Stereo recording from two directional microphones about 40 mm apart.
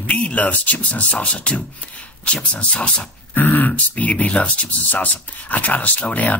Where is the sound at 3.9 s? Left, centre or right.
Left.